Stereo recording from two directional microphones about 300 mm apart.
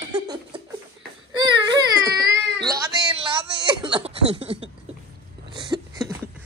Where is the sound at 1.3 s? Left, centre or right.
Centre.